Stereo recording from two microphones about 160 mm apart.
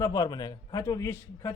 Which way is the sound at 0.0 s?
20° left (ahead or behind).